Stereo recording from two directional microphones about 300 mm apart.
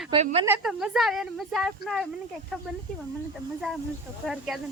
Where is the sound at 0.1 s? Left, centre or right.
Centre.